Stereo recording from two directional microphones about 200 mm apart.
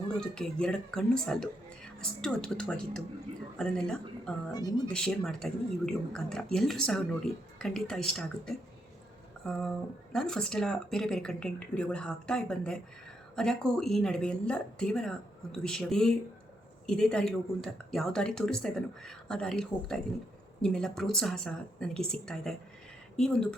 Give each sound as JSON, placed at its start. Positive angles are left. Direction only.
{"t": 0.2, "sound": "speech", "side_deg": 5}
{"t": 9.6, "sound": "speech", "side_deg": 5}